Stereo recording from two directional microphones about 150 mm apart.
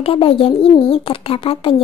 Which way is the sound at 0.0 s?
35° left (ahead or behind).